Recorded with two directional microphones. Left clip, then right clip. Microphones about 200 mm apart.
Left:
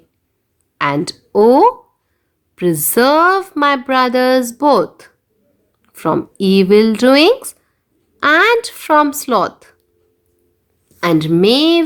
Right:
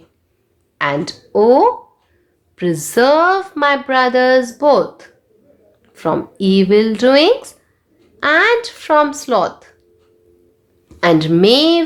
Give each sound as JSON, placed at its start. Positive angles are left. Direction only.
{"t": 0.8, "sound": "speech", "side_deg": 30}
{"t": 10.8, "sound": "a woman's voice", "side_deg": 25}